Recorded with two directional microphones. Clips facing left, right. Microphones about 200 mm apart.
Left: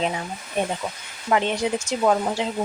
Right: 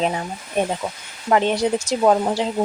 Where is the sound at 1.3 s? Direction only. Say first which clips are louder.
Right 4 dB; 35° right (ahead or behind).